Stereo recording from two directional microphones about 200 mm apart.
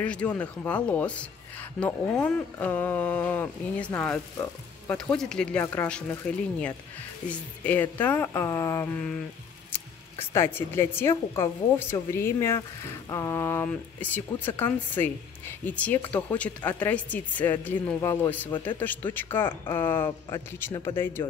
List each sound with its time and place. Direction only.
0.0 s speech: 5° left (ahead or behind)